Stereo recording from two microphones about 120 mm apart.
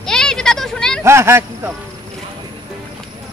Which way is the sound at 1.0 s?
20° right (ahead or behind).